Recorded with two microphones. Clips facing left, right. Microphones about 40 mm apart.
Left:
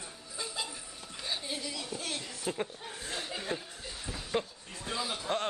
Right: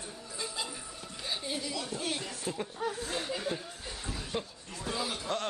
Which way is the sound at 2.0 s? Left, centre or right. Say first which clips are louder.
Right 3 dB; centre.